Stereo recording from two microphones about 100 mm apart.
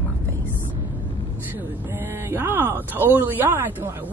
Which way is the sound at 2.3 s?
20° right (ahead or behind).